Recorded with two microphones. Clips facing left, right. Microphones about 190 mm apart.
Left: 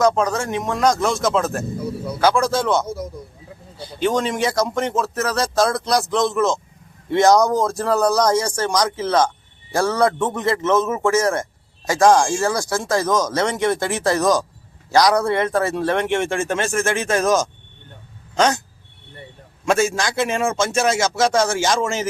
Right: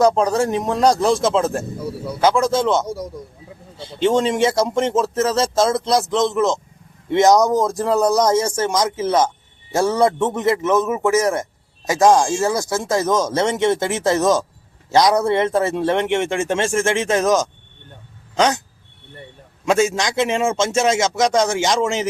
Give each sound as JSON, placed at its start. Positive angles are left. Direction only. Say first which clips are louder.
{"t": 0.0, "sound": "speech", "louder": "right 3 dB", "side_deg": -35}
{"t": 19.6, "sound": "speech", "louder": "right 1 dB", "side_deg": -20}